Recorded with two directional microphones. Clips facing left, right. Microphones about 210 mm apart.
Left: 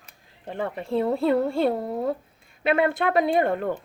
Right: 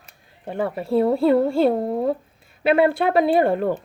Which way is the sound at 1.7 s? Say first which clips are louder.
Right 5 dB; 25° right (ahead or behind).